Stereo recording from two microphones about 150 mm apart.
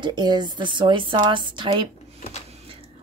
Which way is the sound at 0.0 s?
30° right (ahead or behind).